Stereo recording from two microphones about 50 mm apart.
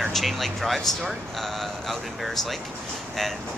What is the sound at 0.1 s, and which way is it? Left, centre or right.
Speech, centre.